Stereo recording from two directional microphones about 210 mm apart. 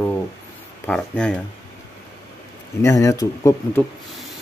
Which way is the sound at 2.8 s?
15° left (ahead or behind).